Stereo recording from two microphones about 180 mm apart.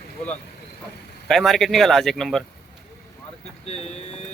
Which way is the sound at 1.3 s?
Centre (ahead or behind).